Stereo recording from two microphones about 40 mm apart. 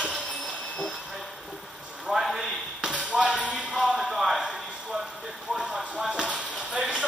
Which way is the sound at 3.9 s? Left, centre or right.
Centre.